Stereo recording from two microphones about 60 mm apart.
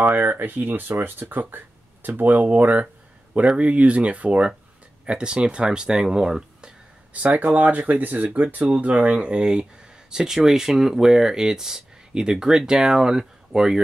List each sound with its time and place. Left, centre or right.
0.0 s speech: right; by 6.7 s centre
7.2 s speech: right; by 13.7 s centre